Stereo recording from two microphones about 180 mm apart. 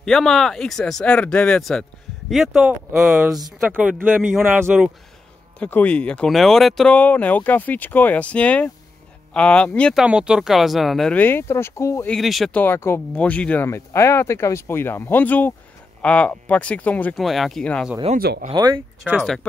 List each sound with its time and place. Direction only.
0.0 s speech: centre (ahead or behind)
3.1 s speech: 10° right (ahead or behind)
5.6 s speech: 10° left (ahead or behind)
10.0 s speech: 5° right (ahead or behind); by 12.1 s 15° left (ahead or behind)
12.1 s speech: centre (ahead or behind)
18.1 s speech: 55° right (ahead or behind)
18.5 s speech: 25° right (ahead or behind)
19.0 s speech: centre (ahead or behind)